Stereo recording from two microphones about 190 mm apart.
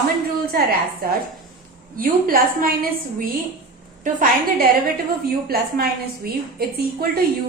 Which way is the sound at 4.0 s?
45° right (ahead or behind).